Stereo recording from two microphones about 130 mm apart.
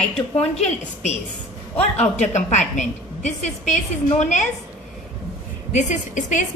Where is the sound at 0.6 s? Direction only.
60° left (ahead or behind).